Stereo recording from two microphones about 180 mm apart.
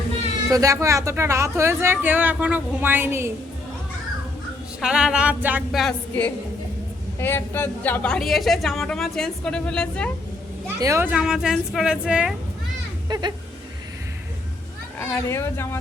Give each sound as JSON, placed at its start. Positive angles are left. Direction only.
{"t": 0.5, "sound": "speech", "side_deg": -20}
{"t": 4.8, "sound": "a woman's voice", "side_deg": -5}
{"t": 7.2, "sound": "a woman's voice", "side_deg": 10}
{"t": 10.8, "sound": "a woman's voice", "side_deg": -15}
{"t": 13.1, "sound": "speech", "side_deg": -25}
{"t": 14.9, "sound": "speech", "side_deg": 15}